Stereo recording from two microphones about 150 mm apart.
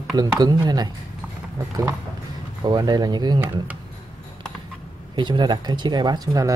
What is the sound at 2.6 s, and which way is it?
Speech, 30° right (ahead or behind).